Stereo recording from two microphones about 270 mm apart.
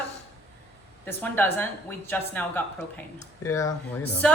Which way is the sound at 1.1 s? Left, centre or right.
Centre.